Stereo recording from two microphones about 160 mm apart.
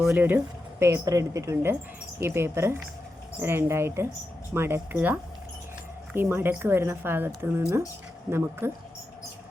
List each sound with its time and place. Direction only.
0.0 s speech: 5° right (ahead or behind)